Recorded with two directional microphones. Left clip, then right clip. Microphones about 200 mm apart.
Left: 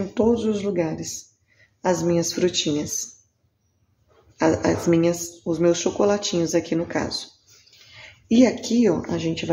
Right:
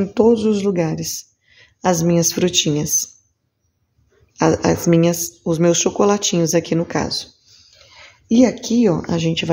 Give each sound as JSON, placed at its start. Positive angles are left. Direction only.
{"t": 0.1, "sound": "speech", "side_deg": -50}
{"t": 4.4, "sound": "speech", "side_deg": -50}
{"t": 8.3, "sound": "speech", "side_deg": -35}